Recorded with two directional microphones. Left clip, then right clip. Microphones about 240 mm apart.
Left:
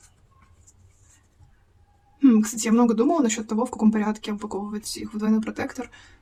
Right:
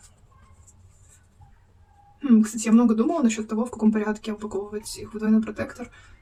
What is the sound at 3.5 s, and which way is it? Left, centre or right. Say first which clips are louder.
Speech: left 1 dB; left.